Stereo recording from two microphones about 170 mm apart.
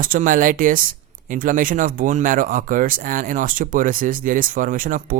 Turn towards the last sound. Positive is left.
turn(degrees=-50)  # may be behind; listen again after turning